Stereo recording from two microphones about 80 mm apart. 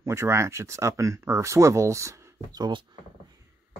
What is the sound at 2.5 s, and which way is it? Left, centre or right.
Speech, right.